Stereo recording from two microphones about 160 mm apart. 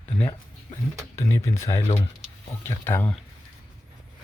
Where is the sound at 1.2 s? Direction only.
20° left (ahead or behind).